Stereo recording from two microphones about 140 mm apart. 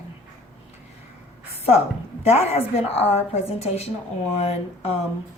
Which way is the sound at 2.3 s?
45° left (ahead or behind).